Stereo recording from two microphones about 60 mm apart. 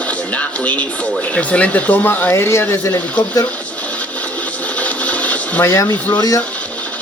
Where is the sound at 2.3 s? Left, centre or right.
Left.